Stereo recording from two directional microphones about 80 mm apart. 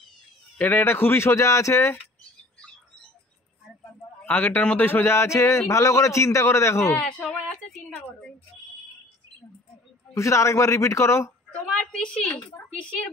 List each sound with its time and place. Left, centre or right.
0.6 s a man's voice: left
4.3 s a man's voice: left
7.0 s speech: centre
10.1 s a man's voice: left
11.7 s a woman's voice: centre